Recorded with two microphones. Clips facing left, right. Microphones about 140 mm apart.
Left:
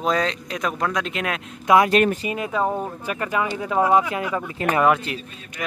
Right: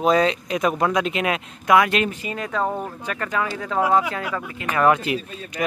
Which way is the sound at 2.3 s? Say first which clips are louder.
Left 2 dB; 10° left (ahead or behind).